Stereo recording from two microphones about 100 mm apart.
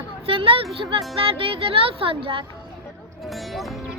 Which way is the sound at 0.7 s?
65° right (ahead or behind).